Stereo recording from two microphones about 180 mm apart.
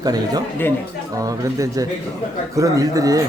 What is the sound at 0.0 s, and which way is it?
Speech, 20° right (ahead or behind).